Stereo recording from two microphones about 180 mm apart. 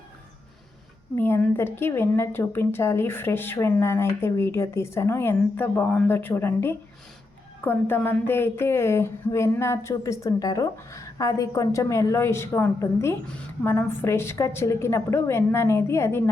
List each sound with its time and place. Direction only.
1.1 s a woman's voice: 10° left (ahead or behind)